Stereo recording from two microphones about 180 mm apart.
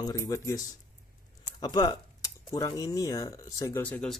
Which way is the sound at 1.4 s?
20° left (ahead or behind).